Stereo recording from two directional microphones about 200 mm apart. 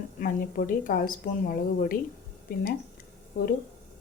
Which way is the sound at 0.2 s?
45° left (ahead or behind).